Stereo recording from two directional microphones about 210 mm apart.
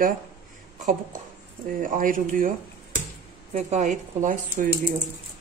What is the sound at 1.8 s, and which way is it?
Speech, 40° right (ahead or behind).